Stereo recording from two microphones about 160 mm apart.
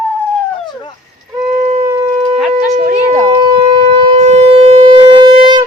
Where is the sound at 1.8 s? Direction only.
20° right (ahead or behind).